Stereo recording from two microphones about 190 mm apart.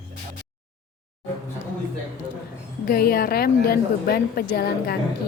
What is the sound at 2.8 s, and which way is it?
A woman's voice, 50° left (ahead or behind).